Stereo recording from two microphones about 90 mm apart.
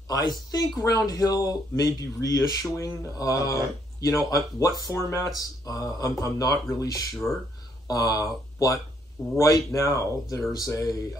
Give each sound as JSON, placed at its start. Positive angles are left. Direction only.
{"t": 0.1, "sound": "speech", "side_deg": 45}
{"t": 7.2, "sound": "speech", "side_deg": 5}
{"t": 7.9, "sound": "speech", "side_deg": 45}